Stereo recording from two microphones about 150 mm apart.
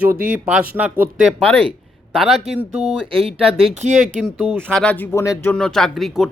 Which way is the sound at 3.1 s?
40° right (ahead or behind).